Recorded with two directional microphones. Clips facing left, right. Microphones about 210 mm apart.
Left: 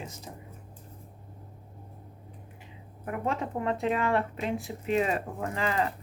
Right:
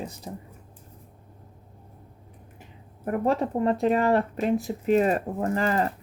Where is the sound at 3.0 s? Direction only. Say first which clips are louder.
Right 7 dB; 40° right (ahead or behind).